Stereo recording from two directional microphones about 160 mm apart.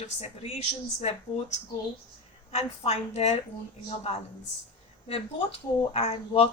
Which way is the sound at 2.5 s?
40° left (ahead or behind).